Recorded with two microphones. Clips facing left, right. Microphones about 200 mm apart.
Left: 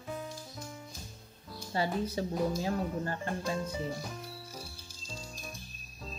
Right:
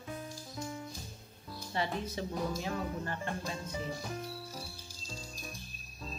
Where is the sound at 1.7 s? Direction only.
35° left (ahead or behind).